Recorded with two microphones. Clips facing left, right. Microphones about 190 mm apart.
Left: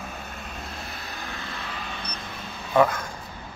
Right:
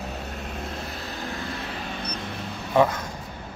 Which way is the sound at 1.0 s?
40° right (ahead or behind).